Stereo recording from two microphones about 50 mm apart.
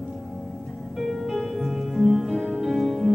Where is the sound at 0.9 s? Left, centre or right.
Centre.